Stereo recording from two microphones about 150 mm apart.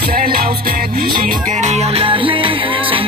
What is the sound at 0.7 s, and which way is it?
Music, 80° right.